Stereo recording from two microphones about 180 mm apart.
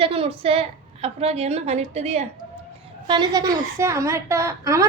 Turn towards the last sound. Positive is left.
turn(degrees=-15)  # may be behind; listen again after turning